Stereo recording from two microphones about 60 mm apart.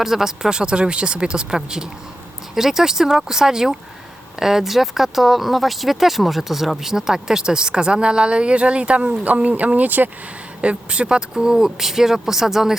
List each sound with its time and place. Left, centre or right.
0.0 s speech: centre